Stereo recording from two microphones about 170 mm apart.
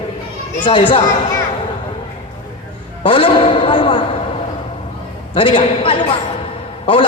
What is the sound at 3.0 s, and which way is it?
A man's voice, 30° left (ahead or behind).